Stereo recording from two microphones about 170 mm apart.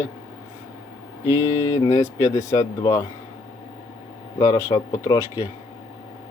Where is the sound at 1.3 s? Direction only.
20° left (ahead or behind).